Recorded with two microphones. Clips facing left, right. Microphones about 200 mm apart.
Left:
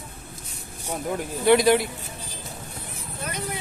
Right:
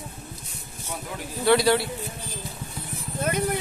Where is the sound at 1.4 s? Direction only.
15° left (ahead or behind).